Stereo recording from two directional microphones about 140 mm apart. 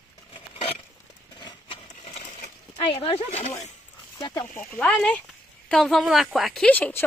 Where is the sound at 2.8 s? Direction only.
45° left (ahead or behind).